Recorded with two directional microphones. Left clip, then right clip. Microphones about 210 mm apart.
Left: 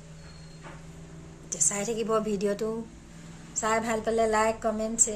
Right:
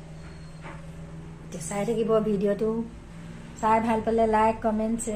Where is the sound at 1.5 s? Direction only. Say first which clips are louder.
Right 1 dB; 5° left (ahead or behind).